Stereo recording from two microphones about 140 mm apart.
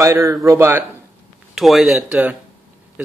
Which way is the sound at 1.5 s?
Centre (ahead or behind).